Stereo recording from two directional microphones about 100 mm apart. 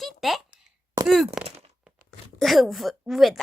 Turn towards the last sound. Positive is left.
turn(degrees=0)  # may be behind; listen again after turning